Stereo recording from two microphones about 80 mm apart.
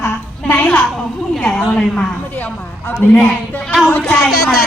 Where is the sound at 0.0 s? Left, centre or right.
Left.